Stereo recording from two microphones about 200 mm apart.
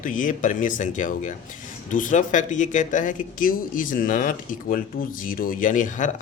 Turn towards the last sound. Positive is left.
turn(degrees=40)  # may be behind; listen again after turning